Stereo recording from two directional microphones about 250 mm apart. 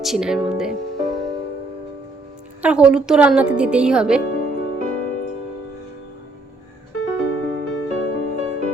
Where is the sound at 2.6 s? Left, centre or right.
Centre.